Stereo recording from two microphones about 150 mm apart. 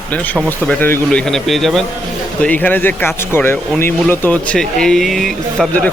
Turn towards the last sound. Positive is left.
turn(degrees=0)  # may be behind; listen again after turning